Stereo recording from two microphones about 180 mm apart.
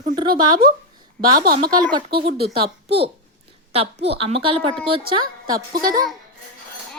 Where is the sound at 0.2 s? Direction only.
25° right (ahead or behind).